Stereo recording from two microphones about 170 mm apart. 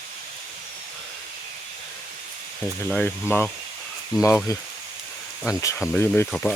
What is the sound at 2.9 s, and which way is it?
Speech, 10° left (ahead or behind).